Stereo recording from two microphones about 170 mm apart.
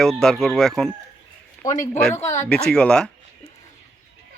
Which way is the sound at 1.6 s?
45° left (ahead or behind).